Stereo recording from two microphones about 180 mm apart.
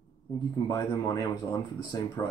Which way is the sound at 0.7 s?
25° left (ahead or behind).